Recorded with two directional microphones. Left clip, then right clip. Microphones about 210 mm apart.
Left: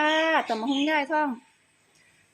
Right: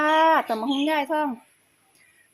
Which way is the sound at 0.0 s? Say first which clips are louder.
Right 4 dB; 10° right (ahead or behind).